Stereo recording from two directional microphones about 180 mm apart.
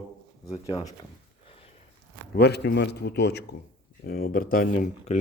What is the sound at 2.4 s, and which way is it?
A man's voice, 65° left (ahead or behind).